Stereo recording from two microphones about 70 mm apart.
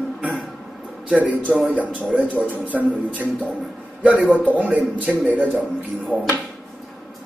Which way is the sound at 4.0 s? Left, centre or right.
Right.